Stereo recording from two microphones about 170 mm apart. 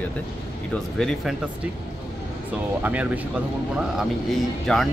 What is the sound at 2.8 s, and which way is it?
Speech, 10° right (ahead or behind).